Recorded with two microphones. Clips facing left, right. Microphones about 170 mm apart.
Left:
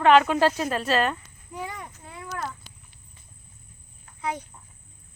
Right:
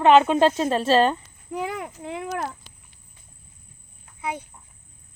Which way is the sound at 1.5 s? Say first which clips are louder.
Right 7 dB; 90° right.